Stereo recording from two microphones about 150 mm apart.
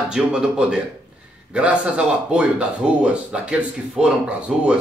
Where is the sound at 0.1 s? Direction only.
5° right (ahead or behind).